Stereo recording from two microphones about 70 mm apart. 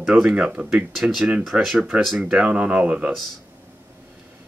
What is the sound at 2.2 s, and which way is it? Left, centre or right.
Speech, centre.